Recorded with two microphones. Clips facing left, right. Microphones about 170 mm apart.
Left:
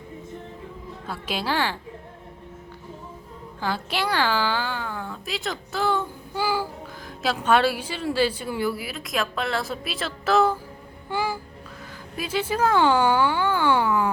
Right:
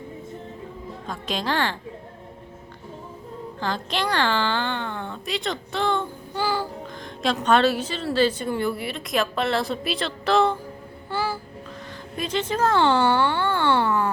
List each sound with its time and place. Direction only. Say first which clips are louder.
1.0 s a woman's voice: right 1 dB; 10° left (ahead or behind)
3.6 s a woman's voice: even; 10° left (ahead or behind)
11.1 s music: even; 15° left (ahead or behind)
12.1 s a woman's voice: even; 10° left (ahead or behind)